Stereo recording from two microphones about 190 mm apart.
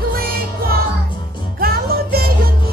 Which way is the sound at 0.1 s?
50° right (ahead or behind).